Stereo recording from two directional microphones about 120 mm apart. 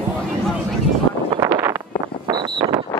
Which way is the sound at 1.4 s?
20° right (ahead or behind).